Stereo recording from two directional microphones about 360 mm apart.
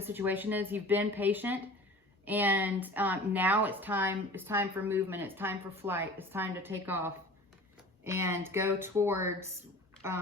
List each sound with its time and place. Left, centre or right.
0.0 s a woman's voice: centre